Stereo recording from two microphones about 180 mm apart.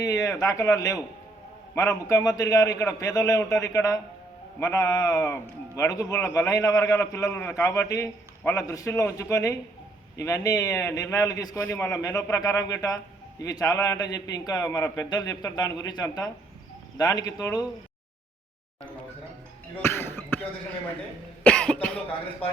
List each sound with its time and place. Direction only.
0.0 s a man's voice: 20° left (ahead or behind)
19.7 s a sound: 10° left (ahead or behind)
21.4 s cough: 5° left (ahead or behind)